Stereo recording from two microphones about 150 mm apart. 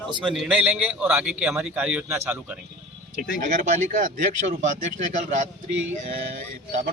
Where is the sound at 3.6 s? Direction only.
60° right (ahead or behind).